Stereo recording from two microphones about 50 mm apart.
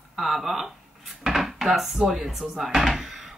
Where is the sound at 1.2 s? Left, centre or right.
Centre.